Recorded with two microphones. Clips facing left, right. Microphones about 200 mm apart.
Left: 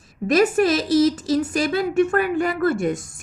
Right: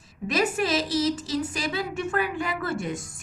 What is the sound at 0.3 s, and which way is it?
A woman's voice, 50° left (ahead or behind).